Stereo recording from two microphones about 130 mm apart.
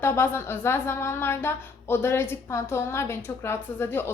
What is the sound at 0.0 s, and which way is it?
A woman's voice, 20° left (ahead or behind).